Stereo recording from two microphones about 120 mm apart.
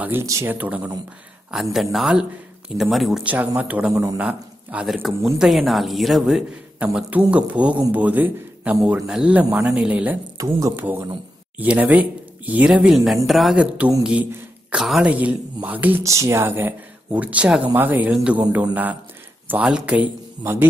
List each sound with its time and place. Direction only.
0.0 s a man's voice: 20° right (ahead or behind); by 3.3 s centre (ahead or behind)
3.3 s a man's voice: 10° right (ahead or behind)
4.8 s a man's voice: centre (ahead or behind)
10.3 s speech: 30° right (ahead or behind)
10.8 s speech: 15° right (ahead or behind)
16.0 s speech: 25° right (ahead or behind); by 20.1 s 10° right (ahead or behind)